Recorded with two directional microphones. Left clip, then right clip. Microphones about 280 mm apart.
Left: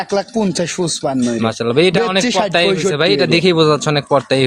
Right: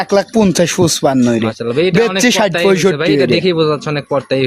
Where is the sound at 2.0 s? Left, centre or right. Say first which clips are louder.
Right 3 dB; right.